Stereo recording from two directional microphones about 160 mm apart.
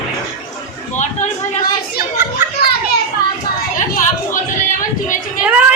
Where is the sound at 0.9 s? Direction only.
50° left (ahead or behind).